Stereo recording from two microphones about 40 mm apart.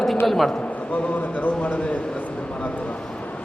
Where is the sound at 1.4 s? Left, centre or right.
Left.